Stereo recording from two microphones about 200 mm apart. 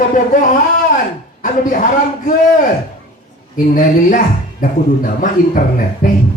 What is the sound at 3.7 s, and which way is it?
A man's voice, 40° left (ahead or behind).